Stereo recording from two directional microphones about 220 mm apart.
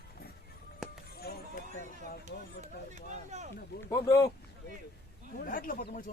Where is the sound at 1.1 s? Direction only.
45° left (ahead or behind).